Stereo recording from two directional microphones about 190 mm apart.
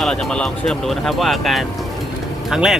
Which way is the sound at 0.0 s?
5° left (ahead or behind).